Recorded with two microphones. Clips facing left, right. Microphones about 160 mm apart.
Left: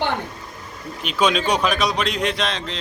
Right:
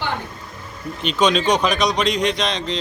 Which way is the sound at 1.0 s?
5° left (ahead or behind).